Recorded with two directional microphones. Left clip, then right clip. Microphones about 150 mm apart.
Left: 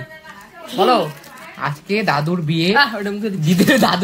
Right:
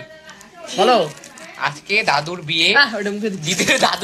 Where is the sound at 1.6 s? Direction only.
40° left (ahead or behind).